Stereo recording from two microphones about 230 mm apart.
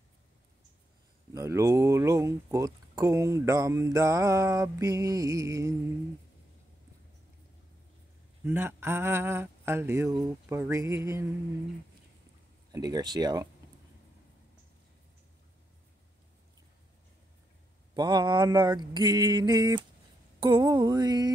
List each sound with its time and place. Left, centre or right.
1.3 s speech: centre
8.5 s speech: centre
12.7 s speech: centre
17.9 s speech: centre